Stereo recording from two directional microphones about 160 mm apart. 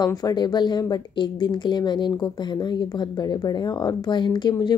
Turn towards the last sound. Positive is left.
turn(degrees=25)  # may be behind; listen again after turning